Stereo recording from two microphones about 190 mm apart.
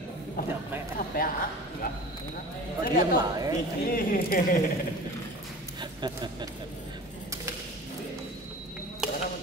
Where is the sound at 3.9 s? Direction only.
50° left (ahead or behind).